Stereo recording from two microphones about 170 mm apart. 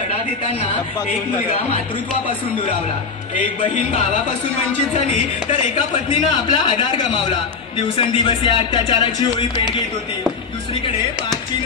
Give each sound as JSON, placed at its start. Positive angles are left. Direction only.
{"t": 6.0, "sound": "a man's voice", "side_deg": 30}